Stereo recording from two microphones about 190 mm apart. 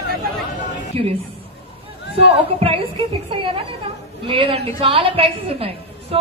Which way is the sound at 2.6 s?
30° right (ahead or behind).